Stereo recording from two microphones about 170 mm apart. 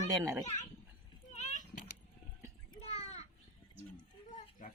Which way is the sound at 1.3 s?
45° left (ahead or behind).